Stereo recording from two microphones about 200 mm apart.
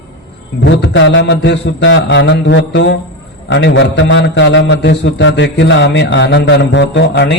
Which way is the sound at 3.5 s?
65° left (ahead or behind).